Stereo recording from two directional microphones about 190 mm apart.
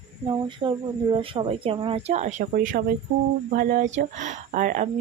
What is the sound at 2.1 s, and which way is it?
Speech, 40° right (ahead or behind).